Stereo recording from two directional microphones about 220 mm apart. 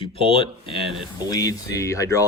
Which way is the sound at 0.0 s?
25° left (ahead or behind).